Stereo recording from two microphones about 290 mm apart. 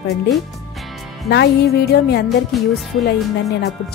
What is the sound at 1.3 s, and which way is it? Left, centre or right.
Speech, left.